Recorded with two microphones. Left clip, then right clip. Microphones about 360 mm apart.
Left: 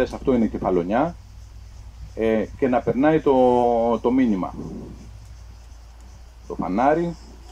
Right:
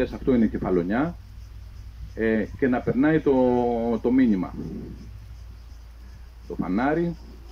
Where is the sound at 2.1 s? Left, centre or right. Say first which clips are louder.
Left 3 dB; left.